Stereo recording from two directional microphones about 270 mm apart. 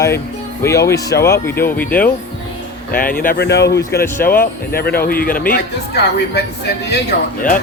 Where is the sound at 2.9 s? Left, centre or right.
Left.